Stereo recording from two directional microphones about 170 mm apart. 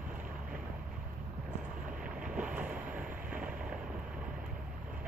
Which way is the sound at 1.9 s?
5° right (ahead or behind).